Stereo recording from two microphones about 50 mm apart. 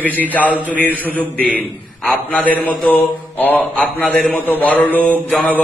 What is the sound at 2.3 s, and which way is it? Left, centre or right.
Mantra, left.